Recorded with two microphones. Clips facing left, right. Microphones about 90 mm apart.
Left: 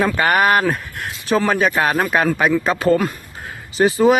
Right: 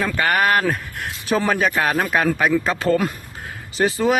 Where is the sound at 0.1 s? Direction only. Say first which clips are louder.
Left 3 dB; 20° left (ahead or behind).